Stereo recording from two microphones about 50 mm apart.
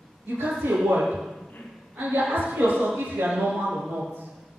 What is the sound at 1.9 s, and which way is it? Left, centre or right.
A woman's voice, right.